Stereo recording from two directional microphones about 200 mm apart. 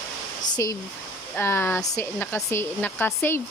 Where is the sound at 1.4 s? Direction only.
10° left (ahead or behind).